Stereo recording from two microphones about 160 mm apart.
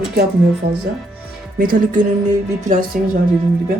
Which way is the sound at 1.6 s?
60° right (ahead or behind).